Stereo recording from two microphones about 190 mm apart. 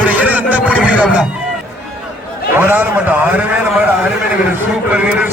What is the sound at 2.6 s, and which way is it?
Speech, 10° right (ahead or behind).